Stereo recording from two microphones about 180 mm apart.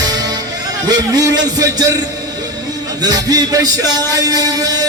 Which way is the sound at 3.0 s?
20° right (ahead or behind).